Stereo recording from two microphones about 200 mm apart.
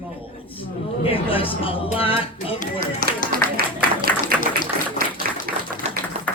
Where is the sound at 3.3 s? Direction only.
50° right (ahead or behind).